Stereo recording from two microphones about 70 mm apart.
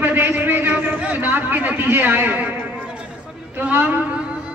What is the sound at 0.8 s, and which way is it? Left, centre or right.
A man's voice, centre.